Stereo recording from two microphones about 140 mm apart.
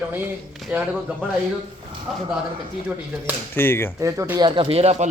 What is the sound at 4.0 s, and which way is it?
Speech, 20° right (ahead or behind).